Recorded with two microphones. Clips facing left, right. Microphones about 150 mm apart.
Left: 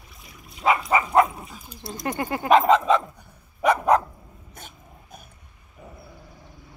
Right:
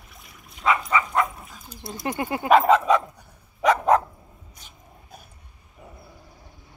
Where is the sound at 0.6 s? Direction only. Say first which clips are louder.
Left 2 dB; 30° left (ahead or behind).